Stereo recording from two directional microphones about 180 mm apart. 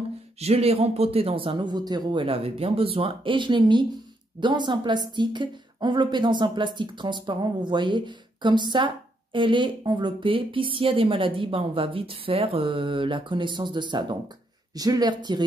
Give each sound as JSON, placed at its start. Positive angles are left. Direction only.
{"t": 0.4, "sound": "speech", "side_deg": -35}